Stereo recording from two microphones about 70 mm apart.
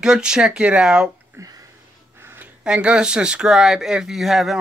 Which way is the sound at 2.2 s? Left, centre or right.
Right.